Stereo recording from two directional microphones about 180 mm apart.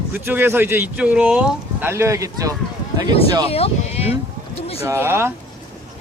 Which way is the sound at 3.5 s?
35° left (ahead or behind).